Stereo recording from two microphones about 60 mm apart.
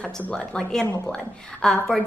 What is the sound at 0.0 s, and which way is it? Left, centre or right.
A woman's voice, left.